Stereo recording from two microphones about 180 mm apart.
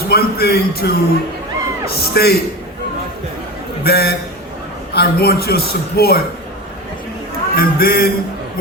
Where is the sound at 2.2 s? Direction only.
60° left (ahead or behind).